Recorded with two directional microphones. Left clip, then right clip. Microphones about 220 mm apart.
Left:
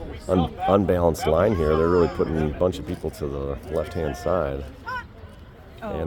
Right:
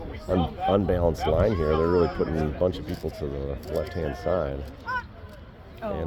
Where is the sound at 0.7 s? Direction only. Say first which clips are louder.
Left 5 dB; 25° left (ahead or behind).